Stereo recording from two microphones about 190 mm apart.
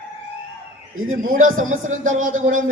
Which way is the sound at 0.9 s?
90° right.